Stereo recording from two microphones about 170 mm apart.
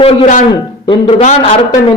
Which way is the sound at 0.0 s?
35° left (ahead or behind).